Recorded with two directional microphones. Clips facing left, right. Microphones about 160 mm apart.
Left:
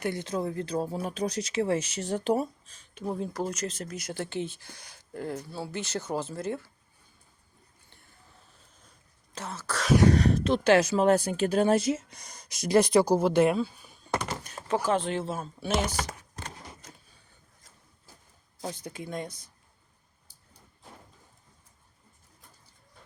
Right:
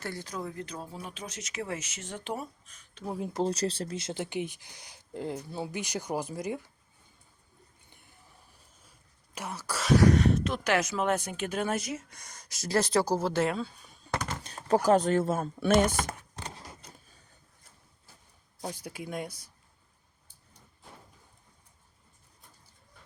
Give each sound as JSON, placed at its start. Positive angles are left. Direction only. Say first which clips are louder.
{"t": 0.0, "sound": "speech", "louder": "left 7 dB", "side_deg": 20}
{"t": 3.3, "sound": "speech", "louder": "right 3 dB", "side_deg": -30}
{"t": 7.9, "sound": "a sound", "louder": "even", "side_deg": -15}
{"t": 9.3, "sound": "speech", "louder": "left 1 dB", "side_deg": -10}
{"t": 10.0, "sound": "speech", "louder": "even", "side_deg": 35}
{"t": 14.4, "sound": "speech", "louder": "right 7 dB", "side_deg": -35}
{"t": 18.6, "sound": "speech", "louder": "left 1 dB", "side_deg": -10}